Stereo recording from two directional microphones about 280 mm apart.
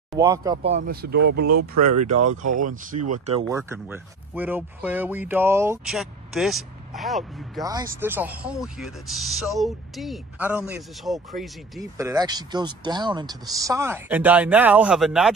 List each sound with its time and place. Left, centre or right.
0.2 s speech: centre
0.7 s speech: right
1.6 s speech: right
2.6 s speech: right; by 7.6 s centre
7.6 s speech: centre
11.8 s speech: centre